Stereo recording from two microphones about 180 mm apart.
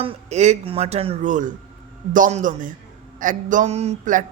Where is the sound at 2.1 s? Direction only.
40° right (ahead or behind).